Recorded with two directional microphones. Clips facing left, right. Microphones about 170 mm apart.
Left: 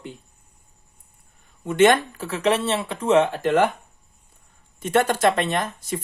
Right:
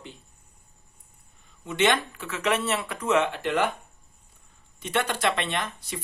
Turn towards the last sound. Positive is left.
turn(degrees=45)  # may be behind; listen again after turning